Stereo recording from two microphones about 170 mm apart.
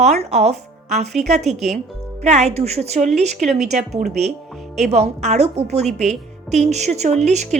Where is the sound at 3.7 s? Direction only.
40° right (ahead or behind).